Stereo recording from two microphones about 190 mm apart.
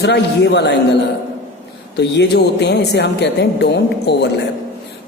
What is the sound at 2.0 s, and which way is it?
Speech, 60° left (ahead or behind).